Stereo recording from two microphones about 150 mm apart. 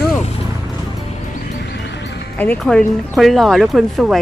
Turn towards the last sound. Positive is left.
turn(degrees=0)  # may be behind; listen again after turning